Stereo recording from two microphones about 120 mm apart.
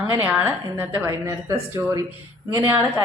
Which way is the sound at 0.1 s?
15° right (ahead or behind).